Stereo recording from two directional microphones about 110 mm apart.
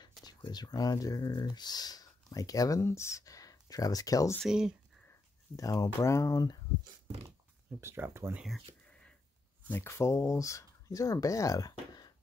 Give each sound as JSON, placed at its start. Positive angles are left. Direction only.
{"t": 0.2, "sound": "speech", "side_deg": 40}
{"t": 4.5, "sound": "speech", "side_deg": -5}
{"t": 5.6, "sound": "speech", "side_deg": 35}
{"t": 7.8, "sound": "speech", "side_deg": -20}
{"t": 8.4, "sound": "speech", "side_deg": 0}
{"t": 8.8, "sound": "a sound", "side_deg": 10}
{"t": 9.7, "sound": "speech", "side_deg": 20}